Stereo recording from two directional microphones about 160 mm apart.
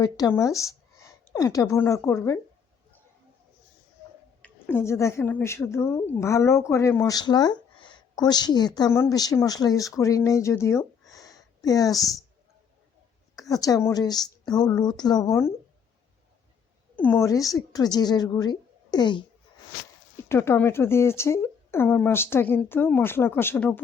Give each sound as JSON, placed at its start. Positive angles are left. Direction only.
{"t": 0.0, "sound": "speech", "side_deg": 20}
{"t": 4.4, "sound": "a woman's voice", "side_deg": 10}
{"t": 13.3, "sound": "a woman's voice", "side_deg": 20}
{"t": 16.9, "sound": "a woman's voice", "side_deg": 10}
{"t": 20.2, "sound": "speech", "side_deg": 15}